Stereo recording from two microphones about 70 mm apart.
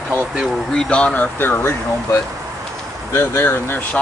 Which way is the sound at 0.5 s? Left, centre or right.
Centre.